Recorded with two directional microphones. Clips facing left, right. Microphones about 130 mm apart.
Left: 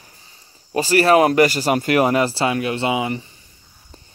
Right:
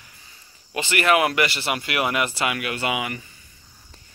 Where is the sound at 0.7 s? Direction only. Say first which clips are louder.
Left 6 dB; 35° left (ahead or behind).